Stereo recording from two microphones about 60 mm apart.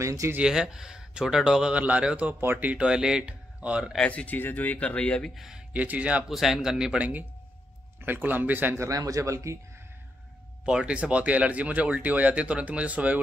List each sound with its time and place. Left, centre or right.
0.0 s speech: right
0.4 s speech: centre
1.8 s speech: right
4.0 s speech: left
5.3 s speech: centre
5.7 s speech: right
6.2 s speech: centre
7.0 s speech: right
8.7 s speech: right
10.6 s speech: centre